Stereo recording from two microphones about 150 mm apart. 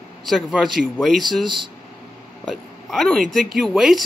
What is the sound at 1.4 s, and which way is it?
Speech, 30° right (ahead or behind).